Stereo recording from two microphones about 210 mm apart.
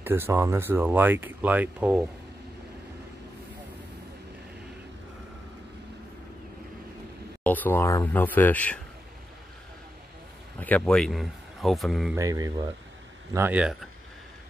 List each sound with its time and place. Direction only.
0.0 s speech: 10° right (ahead or behind)
7.4 s speech: 10° left (ahead or behind)
10.6 s speech: 5° left (ahead or behind)
12.2 s speech: 15° right (ahead or behind)